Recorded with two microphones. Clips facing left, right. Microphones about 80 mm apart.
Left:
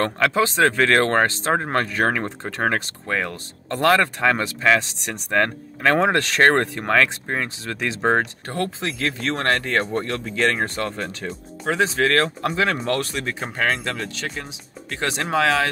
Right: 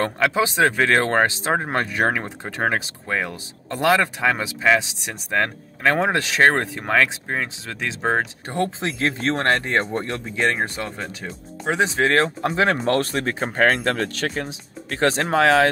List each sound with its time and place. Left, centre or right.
0.0 s speech: centre
8.5 s speech: right
10.3 s speech: centre
11.6 s speech: right